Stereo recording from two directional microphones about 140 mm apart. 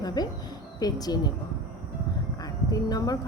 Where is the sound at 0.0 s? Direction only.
30° left (ahead or behind).